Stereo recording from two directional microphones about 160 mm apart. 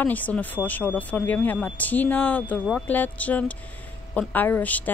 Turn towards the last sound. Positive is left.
turn(degrees=10)  # may be behind; listen again after turning